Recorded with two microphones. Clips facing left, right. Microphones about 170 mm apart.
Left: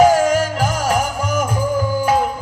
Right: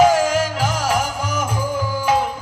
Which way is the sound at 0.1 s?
Centre (ahead or behind).